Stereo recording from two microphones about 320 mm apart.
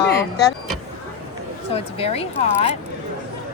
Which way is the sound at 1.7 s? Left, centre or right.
Centre.